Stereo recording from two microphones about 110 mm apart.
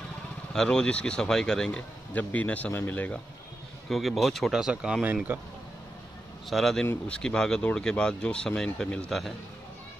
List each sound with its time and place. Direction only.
0.5 s speech: 5° left (ahead or behind)
3.9 s speech: centre (ahead or behind)
6.5 s speech: 5° left (ahead or behind)